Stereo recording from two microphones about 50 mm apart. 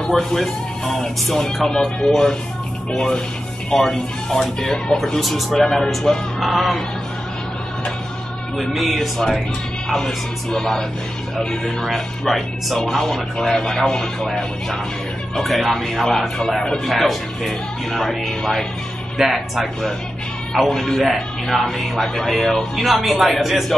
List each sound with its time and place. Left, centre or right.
0.0 s speech: centre
8.5 s speech: centre
19.1 s speech: centre